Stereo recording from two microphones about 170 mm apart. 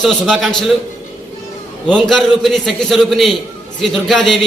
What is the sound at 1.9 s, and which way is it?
A man's voice, centre (ahead or behind).